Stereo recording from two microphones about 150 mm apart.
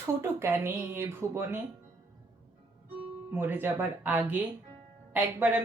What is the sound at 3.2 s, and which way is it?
Speech, 15° right (ahead or behind).